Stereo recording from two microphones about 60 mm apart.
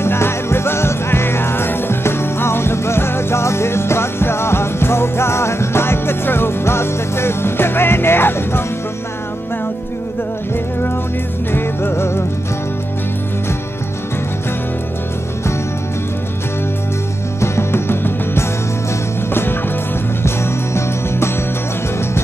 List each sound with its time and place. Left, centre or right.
0.0 s music: left
11.5 s music: left
17.4 s music: left
20.2 s music: left